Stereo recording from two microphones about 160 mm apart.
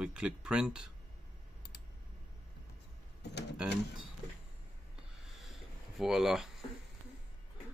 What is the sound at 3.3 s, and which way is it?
Speech, 90° left.